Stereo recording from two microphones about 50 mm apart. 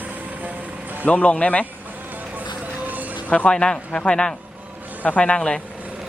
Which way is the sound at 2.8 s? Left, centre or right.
Right.